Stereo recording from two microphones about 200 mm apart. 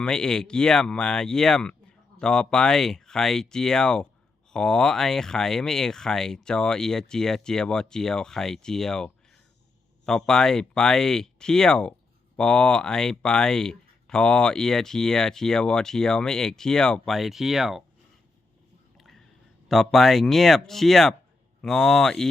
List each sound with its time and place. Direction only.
0.0 s speech: 5° left (ahead or behind)
18.9 s a sound: centre (ahead or behind)
19.6 s speech: centre (ahead or behind)